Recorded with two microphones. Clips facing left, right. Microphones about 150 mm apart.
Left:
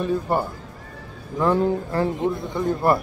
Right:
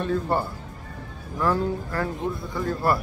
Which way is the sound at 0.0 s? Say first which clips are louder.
Left 2 dB; 15° left (ahead or behind).